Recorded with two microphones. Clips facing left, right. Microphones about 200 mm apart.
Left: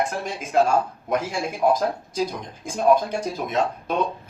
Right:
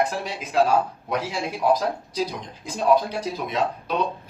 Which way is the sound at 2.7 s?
50° left (ahead or behind).